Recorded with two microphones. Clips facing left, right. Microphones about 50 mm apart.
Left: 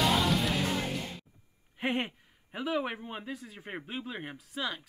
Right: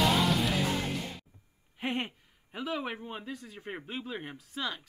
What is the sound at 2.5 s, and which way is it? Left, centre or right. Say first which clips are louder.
Speech: left 3 dB; centre.